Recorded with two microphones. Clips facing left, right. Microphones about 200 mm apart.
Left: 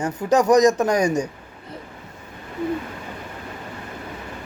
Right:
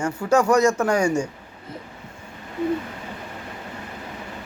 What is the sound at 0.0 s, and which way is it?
Speech, 20° left (ahead or behind).